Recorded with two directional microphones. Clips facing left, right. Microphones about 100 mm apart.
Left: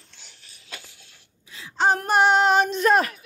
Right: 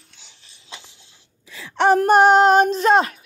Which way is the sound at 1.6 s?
75° right (ahead or behind).